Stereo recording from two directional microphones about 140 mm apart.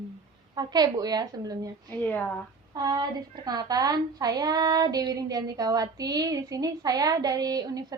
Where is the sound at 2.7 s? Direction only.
30° right (ahead or behind).